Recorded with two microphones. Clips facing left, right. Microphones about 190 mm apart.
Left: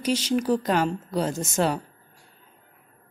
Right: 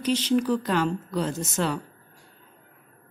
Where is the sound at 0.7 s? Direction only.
40° left (ahead or behind).